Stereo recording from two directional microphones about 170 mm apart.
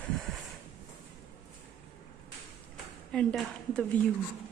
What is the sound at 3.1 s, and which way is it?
Speech, 5° left (ahead or behind).